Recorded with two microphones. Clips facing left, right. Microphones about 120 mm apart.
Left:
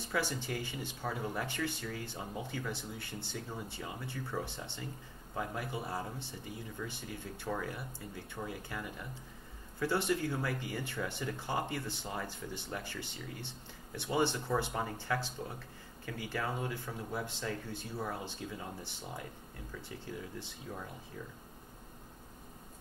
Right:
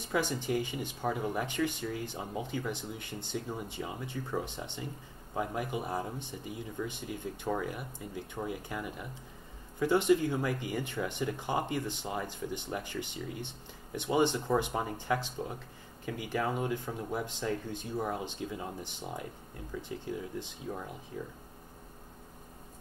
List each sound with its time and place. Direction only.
0.0 s speech: 15° right (ahead or behind)